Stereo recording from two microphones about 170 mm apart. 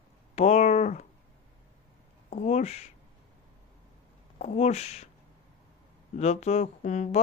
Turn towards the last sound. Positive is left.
turn(degrees=45)  # may be behind; listen again after turning